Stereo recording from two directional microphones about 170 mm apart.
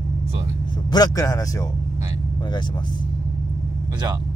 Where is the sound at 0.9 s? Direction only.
20° left (ahead or behind).